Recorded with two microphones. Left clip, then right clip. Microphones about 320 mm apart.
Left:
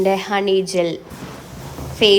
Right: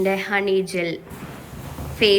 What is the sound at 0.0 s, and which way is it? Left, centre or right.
Speech, centre.